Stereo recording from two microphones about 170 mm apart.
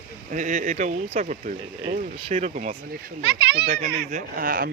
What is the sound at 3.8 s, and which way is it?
Speech, 55° right (ahead or behind).